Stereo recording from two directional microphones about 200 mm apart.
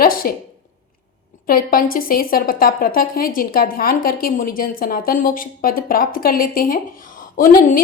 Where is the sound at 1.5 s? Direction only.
45° left (ahead or behind).